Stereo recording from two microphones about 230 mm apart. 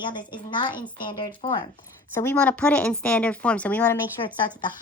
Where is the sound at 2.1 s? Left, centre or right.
Centre.